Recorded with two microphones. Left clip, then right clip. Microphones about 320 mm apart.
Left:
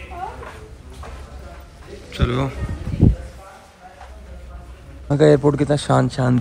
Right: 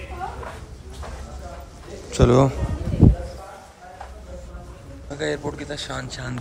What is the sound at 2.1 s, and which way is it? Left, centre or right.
Speech, centre.